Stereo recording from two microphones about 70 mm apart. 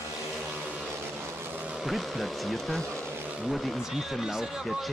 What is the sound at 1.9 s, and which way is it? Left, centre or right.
Speech, centre.